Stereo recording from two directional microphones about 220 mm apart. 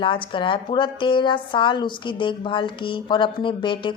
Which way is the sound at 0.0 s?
25° left (ahead or behind).